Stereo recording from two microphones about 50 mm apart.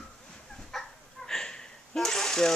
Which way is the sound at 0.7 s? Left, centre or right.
Centre.